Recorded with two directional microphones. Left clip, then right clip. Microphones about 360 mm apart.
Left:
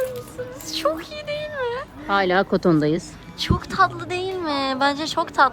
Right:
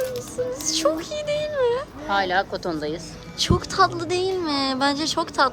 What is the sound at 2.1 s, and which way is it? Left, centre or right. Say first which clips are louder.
Speech: left 3 dB; centre.